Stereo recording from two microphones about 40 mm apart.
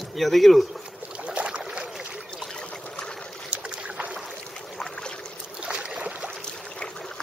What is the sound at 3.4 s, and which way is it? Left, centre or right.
Boat, right.